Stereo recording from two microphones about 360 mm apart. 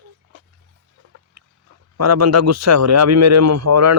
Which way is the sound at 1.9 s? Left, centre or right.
Right.